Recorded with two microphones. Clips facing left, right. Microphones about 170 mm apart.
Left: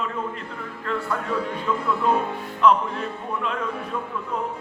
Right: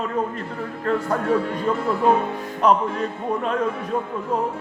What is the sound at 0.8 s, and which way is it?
Speech, 40° right (ahead or behind).